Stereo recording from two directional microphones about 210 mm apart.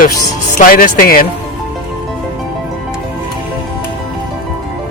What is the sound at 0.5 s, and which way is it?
Speech, 40° left (ahead or behind).